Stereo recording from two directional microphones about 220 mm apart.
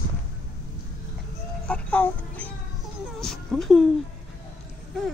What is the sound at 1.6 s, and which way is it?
Music, 5° left (ahead or behind).